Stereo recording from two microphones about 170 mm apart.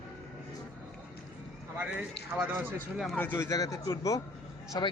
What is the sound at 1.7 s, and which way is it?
Speech, 5° right (ahead or behind).